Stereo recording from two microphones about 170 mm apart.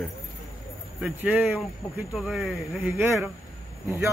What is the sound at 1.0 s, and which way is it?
Speech, 5° right (ahead or behind).